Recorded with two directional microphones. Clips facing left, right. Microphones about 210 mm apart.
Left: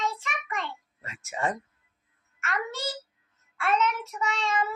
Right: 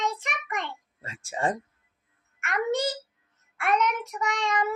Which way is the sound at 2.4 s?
20° right (ahead or behind).